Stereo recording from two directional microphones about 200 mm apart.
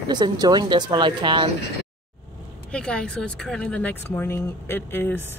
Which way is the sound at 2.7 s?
5° left (ahead or behind).